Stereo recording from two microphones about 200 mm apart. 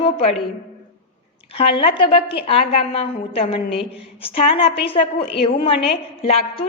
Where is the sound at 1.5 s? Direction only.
30° left (ahead or behind).